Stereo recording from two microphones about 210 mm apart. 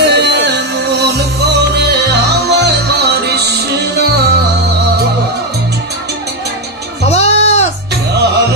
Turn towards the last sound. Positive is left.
turn(degrees=30)  # may be behind; listen again after turning